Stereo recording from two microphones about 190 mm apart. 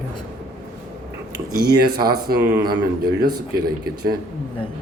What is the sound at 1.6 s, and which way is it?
Speech, 55° right (ahead or behind).